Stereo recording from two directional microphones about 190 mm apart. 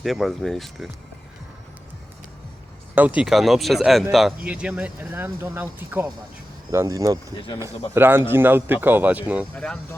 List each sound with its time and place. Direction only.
0.0 s speech: centre (ahead or behind)
3.2 s speech: centre (ahead or behind)